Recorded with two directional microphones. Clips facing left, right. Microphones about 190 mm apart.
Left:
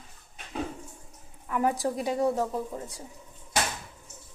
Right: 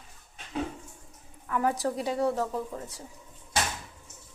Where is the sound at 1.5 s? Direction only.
15° left (ahead or behind).